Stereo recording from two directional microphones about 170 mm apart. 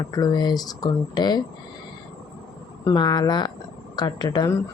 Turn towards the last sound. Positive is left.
turn(degrees=25)  # may be behind; listen again after turning